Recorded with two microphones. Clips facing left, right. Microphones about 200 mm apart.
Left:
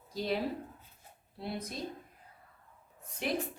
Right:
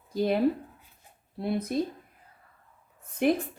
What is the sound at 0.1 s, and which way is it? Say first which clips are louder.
A woman's voice: right 9 dB; 55° right (ahead or behind).